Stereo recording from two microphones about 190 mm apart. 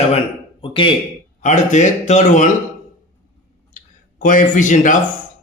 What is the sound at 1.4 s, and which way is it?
A man's voice, 40° left (ahead or behind).